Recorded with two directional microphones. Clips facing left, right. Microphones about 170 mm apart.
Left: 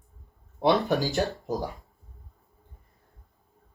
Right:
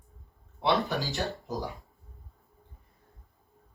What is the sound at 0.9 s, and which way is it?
Speech, 45° left (ahead or behind).